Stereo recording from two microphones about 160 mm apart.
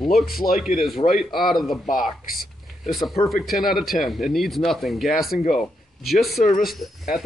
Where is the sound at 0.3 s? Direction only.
70° left (ahead or behind).